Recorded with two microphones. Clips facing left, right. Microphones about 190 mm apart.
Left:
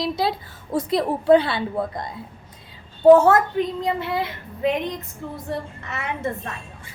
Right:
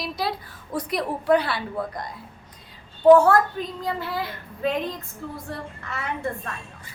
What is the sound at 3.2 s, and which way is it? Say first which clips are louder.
Speech: left 2 dB; 20° left (ahead or behind).